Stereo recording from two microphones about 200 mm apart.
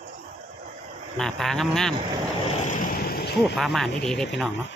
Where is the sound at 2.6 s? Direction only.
45° left (ahead or behind).